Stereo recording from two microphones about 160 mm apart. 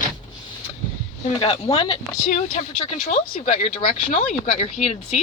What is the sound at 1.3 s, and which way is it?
Speech, 35° left (ahead or behind).